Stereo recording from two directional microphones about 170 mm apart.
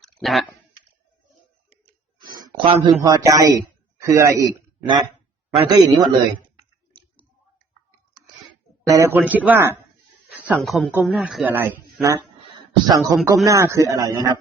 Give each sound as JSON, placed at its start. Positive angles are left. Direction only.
{"t": 0.0, "sound": "clicking", "side_deg": 0}
{"t": 2.1, "sound": "a sound", "side_deg": -25}
{"t": 3.0, "sound": "a man's voice", "side_deg": -20}
{"t": 5.6, "sound": "speech", "side_deg": -25}
{"t": 8.9, "sound": "a man's voice", "side_deg": -15}
{"t": 10.5, "sound": "speech", "side_deg": 0}